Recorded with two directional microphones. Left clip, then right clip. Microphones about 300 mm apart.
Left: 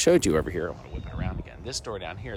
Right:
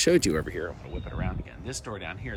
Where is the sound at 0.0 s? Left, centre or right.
Left.